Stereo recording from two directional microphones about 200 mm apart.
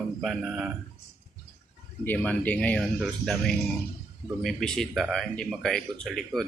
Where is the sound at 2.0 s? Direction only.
5° left (ahead or behind).